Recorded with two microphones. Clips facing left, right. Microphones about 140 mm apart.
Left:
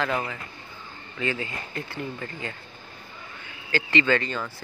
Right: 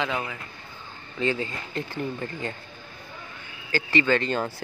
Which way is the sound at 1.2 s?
25° right (ahead or behind).